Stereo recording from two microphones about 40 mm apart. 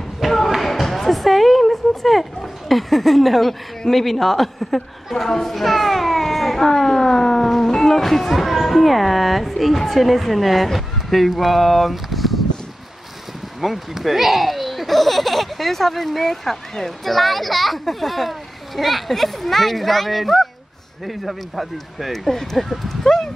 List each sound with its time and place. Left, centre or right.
0.2 s a sound: centre
3.9 s a woman's voice: centre
13.6 s speech: centre